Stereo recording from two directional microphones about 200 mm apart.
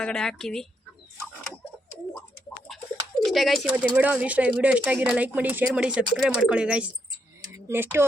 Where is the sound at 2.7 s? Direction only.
Centre (ahead or behind).